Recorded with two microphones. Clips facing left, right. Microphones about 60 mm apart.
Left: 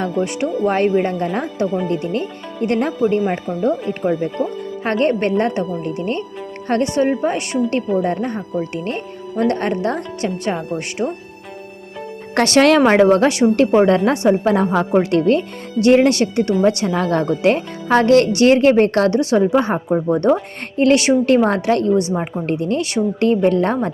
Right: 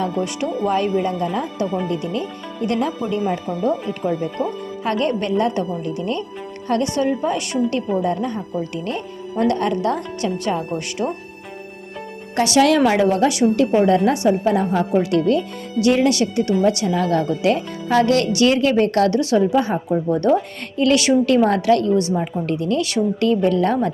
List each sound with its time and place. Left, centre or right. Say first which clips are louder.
0.0 s speech: left 2 dB; left
12.4 s a woman's voice: left 2 dB; left